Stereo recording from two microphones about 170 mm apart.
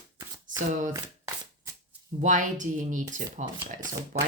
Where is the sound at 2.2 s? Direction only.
50° right (ahead or behind).